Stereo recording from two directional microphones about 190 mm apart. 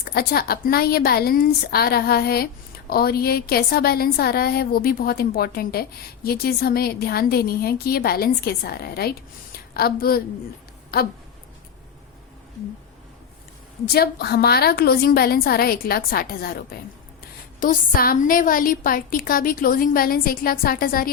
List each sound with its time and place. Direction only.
0.0 s a woman's voice: 55° left (ahead or behind)
13.9 s a woman's voice: 55° left (ahead or behind)
17.6 s a woman's voice: 45° left (ahead or behind)